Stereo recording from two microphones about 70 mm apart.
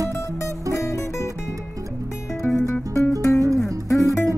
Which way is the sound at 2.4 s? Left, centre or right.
Left.